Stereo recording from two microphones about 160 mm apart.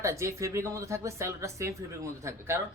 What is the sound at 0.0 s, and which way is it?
A woman's voice, 20° right (ahead or behind).